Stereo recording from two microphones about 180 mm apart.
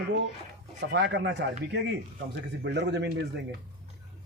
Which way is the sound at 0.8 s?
70° right (ahead or behind).